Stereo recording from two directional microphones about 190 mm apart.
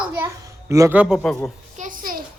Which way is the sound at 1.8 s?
45° right (ahead or behind).